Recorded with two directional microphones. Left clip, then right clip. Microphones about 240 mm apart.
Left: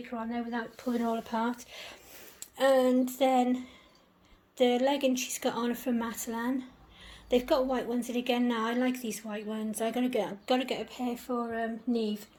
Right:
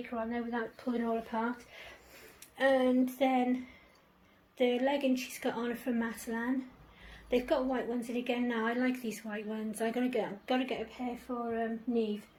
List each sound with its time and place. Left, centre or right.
0.2 s speech: left
2.6 s speech: left